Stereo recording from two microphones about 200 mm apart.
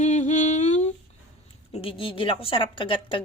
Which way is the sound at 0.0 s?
35° left (ahead or behind).